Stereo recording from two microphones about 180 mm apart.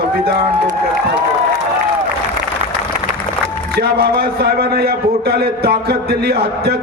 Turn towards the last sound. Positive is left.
turn(degrees=-60)  # may be behind; listen again after turning